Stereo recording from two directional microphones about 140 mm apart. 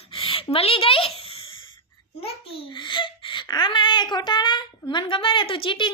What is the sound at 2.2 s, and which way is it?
A child's voice, 40° left (ahead or behind).